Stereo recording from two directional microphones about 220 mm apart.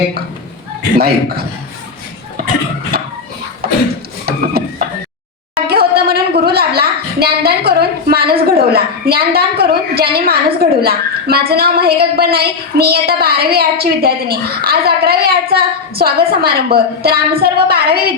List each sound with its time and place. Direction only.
0.9 s a woman's voice: 45° right (ahead or behind)
5.6 s a woman's voice: 45° right (ahead or behind)